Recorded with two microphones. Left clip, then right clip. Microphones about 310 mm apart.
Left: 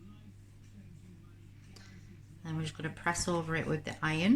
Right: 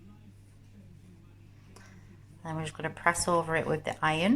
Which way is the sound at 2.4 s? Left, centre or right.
Centre.